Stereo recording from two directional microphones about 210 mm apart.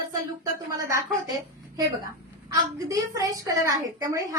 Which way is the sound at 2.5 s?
15° right (ahead or behind).